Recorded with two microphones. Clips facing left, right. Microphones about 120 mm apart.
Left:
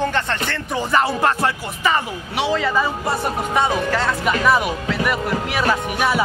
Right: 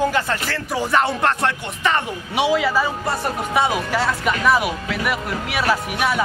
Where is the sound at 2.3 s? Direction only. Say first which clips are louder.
Right 1 dB; 10° right (ahead or behind).